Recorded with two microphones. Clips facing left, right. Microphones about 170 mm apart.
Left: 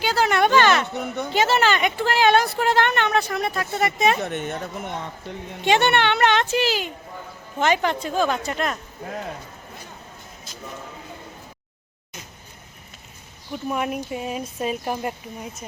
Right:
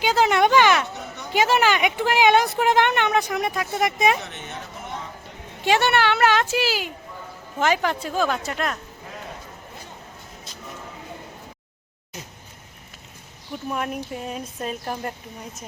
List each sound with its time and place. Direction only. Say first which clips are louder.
0.0 s speech: right 1 dB; 20° right (ahead or behind)
0.9 s a sound: left 8 dB; 55° left (ahead or behind)
1.3 s speech: right 1 dB; 10° right (ahead or behind)
4.2 s speech: left 8 dB; 50° left (ahead or behind)
5.6 s speech: left 1 dB; 5° right (ahead or behind)
13.7 s speech: left 2 dB; 5° left (ahead or behind)